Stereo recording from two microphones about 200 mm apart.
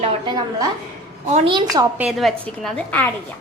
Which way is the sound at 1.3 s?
35° right (ahead or behind).